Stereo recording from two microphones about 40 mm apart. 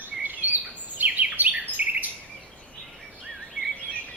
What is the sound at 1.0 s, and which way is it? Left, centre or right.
Bird, right.